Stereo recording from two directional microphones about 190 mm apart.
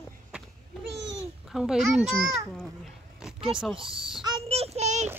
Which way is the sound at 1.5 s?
Centre (ahead or behind).